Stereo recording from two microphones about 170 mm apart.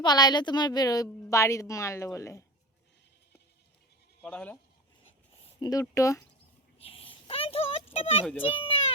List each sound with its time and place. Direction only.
0.0 s a woman's voice: 25° left (ahead or behind)
4.2 s speech: 5° left (ahead or behind)
5.4 s a sound: 25° left (ahead or behind)
5.8 s speech: 20° left (ahead or behind)
6.7 s dog: 35° left (ahead or behind)
7.9 s a child's voice: 35° left (ahead or behind)